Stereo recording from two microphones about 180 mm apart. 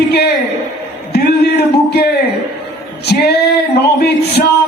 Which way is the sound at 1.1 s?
65° left (ahead or behind).